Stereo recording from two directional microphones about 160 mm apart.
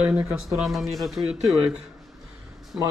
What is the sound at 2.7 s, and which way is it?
Speech, 5° right (ahead or behind).